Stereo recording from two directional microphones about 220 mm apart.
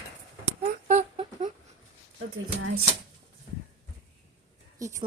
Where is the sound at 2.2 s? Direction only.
70° right (ahead or behind).